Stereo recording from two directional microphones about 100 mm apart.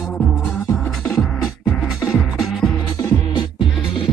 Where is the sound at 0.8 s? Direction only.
5° left (ahead or behind).